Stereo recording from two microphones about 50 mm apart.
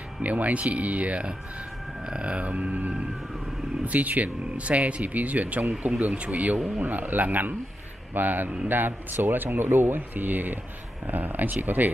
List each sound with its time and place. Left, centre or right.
0.2 s speech: right